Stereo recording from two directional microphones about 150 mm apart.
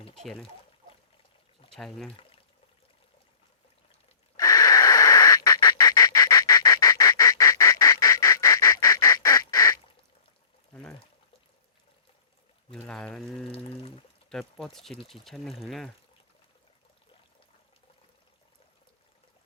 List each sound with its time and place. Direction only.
0.2 s speech: centre (ahead or behind)
1.7 s speech: centre (ahead or behind)
4.4 s bird: 25° left (ahead or behind)
12.7 s speech: 5° left (ahead or behind)
13.5 s a sound: 40° left (ahead or behind)
14.3 s speech: 5° left (ahead or behind)